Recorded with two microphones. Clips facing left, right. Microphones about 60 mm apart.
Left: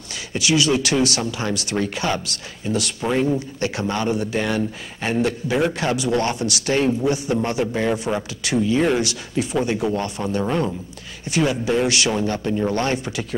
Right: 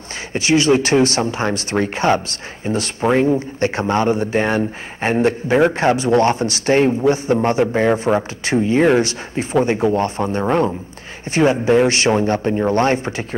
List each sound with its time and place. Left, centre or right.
0.3 s speech: right